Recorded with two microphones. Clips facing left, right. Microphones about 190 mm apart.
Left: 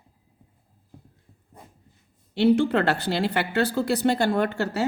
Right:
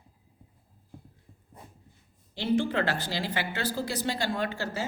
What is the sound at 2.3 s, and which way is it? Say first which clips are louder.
Speech: left 7 dB; 70° left (ahead or behind).